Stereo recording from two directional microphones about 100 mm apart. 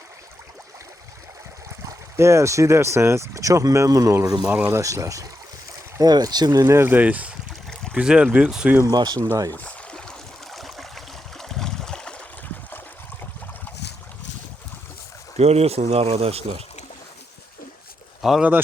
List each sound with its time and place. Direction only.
1.9 s speech: 30° right (ahead or behind)
4.4 s speech: 15° right (ahead or behind)
4.7 s speech: 30° right (ahead or behind); by 8.7 s 10° right (ahead or behind)
8.9 s speech: 45° right (ahead or behind)
9.5 s stream: 15° left (ahead or behind)
15.4 s speech: 90° right
18.2 s speech: 5° right (ahead or behind)